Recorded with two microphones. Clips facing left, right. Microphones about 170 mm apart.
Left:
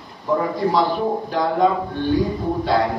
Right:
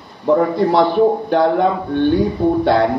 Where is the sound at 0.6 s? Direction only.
65° right (ahead or behind).